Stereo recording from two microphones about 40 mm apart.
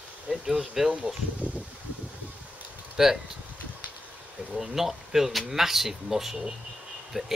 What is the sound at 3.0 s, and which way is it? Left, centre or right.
Speech, centre.